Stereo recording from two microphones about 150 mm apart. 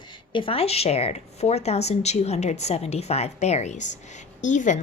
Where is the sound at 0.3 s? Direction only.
40° left (ahead or behind).